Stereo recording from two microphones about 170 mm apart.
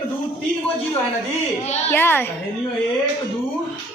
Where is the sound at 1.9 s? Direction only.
10° left (ahead or behind).